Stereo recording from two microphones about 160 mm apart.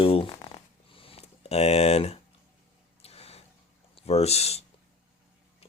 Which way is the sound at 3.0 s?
40° left (ahead or behind).